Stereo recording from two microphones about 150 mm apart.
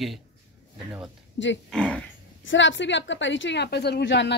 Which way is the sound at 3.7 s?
90° left.